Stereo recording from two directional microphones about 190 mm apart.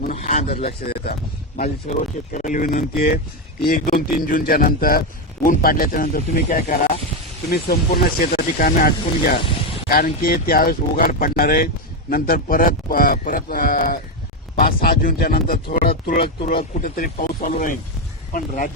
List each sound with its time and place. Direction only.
0.1 s speech: 35° left (ahead or behind)
0.6 s speech: 55° left (ahead or behind)
1.5 s speech: 40° left (ahead or behind)